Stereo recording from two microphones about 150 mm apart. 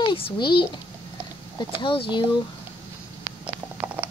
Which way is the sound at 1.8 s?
35° left (ahead or behind).